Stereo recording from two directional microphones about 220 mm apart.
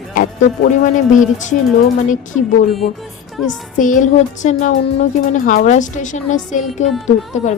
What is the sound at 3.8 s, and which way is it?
A woman's voice, 35° left (ahead or behind).